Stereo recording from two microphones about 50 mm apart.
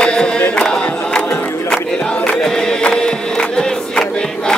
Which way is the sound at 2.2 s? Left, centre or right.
Centre.